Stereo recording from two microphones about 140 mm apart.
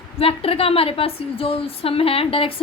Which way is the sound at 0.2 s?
45° left (ahead or behind).